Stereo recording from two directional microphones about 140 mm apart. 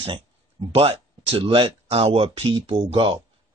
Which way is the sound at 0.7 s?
45° right (ahead or behind).